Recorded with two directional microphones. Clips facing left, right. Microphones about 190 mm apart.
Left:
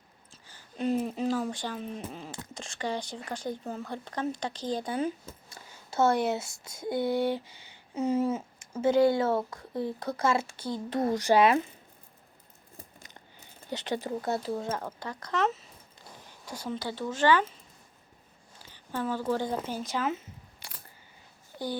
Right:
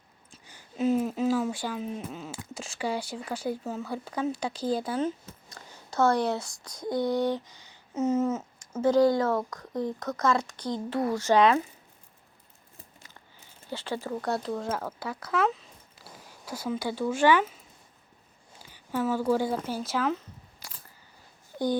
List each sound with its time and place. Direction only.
0.3 s a sound: 15° right (ahead or behind)
0.8 s speech: centre (ahead or behind)
5.5 s speech: 25° left (ahead or behind)
6.7 s speech: 5° left (ahead or behind)
7.1 s speech: 25° left (ahead or behind)
8.8 s speech: 25° left (ahead or behind)
10.6 s speech: 10° left (ahead or behind)
10.9 s speech: 20° left (ahead or behind)
12.7 s a sound: 20° left (ahead or behind)
13.7 s speech: 20° left (ahead or behind)
14.3 s speech: 5° left (ahead or behind)
18.7 s a sound: 10° right (ahead or behind)
19.3 s speech: 10° right (ahead or behind)